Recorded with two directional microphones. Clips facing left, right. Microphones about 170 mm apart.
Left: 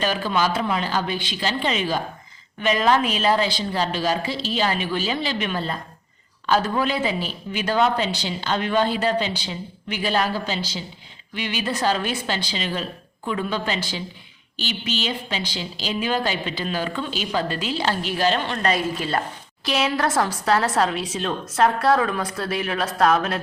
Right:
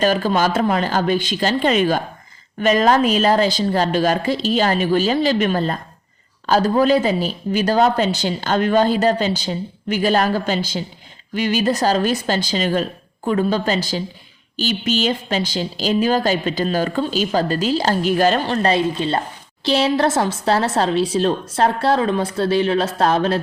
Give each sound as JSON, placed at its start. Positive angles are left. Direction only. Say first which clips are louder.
{"t": 0.0, "sound": "a woman's voice", "louder": "right 5 dB", "side_deg": -45}